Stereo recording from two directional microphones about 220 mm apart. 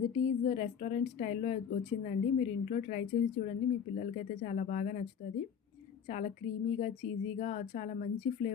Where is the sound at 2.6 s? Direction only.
35° left (ahead or behind).